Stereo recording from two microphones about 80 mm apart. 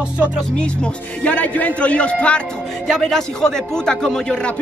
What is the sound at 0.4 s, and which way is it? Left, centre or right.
A man's voice, centre.